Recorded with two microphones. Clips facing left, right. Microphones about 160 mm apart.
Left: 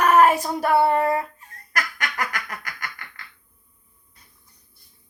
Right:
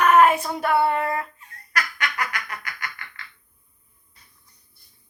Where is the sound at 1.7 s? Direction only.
45° left (ahead or behind).